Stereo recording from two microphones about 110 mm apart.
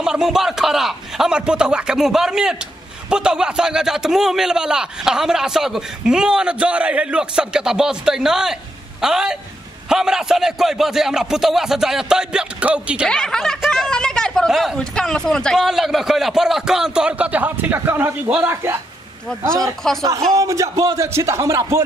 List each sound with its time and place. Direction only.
0.0 s a man's voice: 5° right (ahead or behind)
13.1 s a man's voice: 5° left (ahead or behind); by 18.8 s 20° right (ahead or behind)
19.8 s a man's voice: 5° left (ahead or behind)
20.3 s speech: 30° right (ahead or behind)